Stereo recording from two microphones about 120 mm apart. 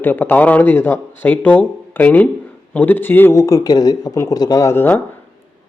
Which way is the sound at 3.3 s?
30° left (ahead or behind).